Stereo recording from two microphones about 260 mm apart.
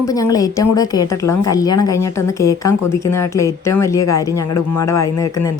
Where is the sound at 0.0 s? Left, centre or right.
Centre.